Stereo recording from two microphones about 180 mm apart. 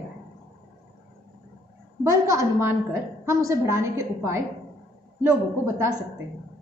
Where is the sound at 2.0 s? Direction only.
20° right (ahead or behind).